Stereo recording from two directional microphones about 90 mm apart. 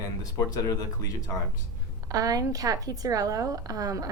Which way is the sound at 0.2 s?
40° left (ahead or behind).